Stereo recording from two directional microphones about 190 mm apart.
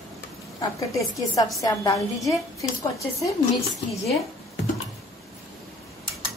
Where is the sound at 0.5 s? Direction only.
15° left (ahead or behind).